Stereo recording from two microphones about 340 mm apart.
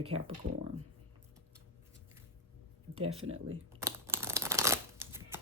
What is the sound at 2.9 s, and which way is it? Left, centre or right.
Speech, centre.